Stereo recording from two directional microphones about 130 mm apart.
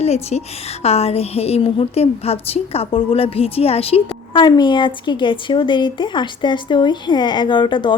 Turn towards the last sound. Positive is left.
turn(degrees=35)  # may be behind; listen again after turning